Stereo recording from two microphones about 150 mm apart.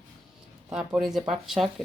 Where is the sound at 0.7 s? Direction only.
5° right (ahead or behind).